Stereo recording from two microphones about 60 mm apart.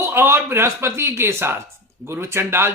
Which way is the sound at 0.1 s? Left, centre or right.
Right.